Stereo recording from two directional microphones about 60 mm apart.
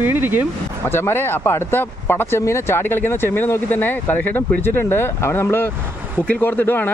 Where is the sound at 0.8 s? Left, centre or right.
Left.